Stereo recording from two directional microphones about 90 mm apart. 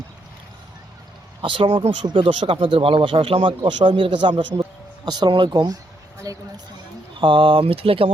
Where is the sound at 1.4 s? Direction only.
70° right (ahead or behind).